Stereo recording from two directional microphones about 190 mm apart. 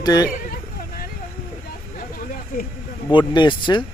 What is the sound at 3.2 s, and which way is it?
Speech, 25° left (ahead or behind).